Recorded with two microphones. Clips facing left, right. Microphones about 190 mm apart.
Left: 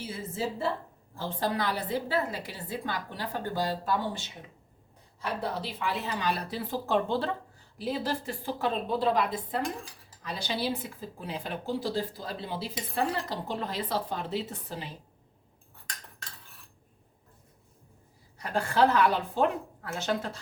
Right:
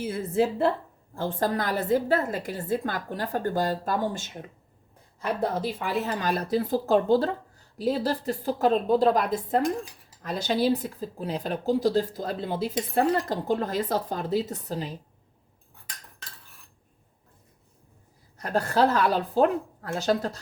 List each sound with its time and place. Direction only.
0.0 s a woman's voice: 55° right (ahead or behind)
5.4 s a woman's voice: 45° right (ahead or behind)
18.3 s a woman's voice: 45° right (ahead or behind)